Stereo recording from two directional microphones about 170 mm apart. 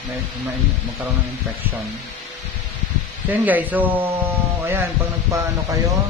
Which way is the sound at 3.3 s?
10° right (ahead or behind).